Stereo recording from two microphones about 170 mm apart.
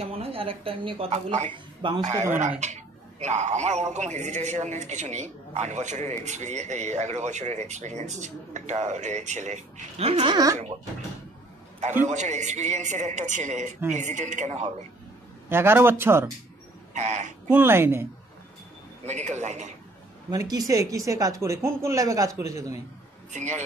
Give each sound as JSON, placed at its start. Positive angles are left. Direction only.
{"t": 0.0, "sound": "a woman's voice", "side_deg": -35}
{"t": 12.0, "sound": "speech", "side_deg": -45}
{"t": 15.5, "sound": "a man's voice", "side_deg": -15}
{"t": 16.9, "sound": "speech", "side_deg": -45}
{"t": 17.5, "sound": "a man's voice", "side_deg": -10}
{"t": 19.0, "sound": "speech", "side_deg": -45}
{"t": 20.2, "sound": "speech", "side_deg": -25}
{"t": 23.3, "sound": "speech", "side_deg": -45}